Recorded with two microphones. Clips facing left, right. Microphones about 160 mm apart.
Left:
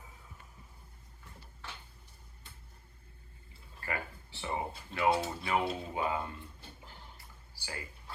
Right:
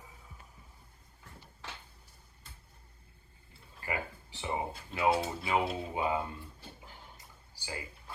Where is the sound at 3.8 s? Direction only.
15° right (ahead or behind).